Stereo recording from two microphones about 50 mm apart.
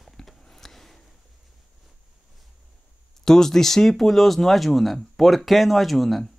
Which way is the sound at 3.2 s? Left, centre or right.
Centre.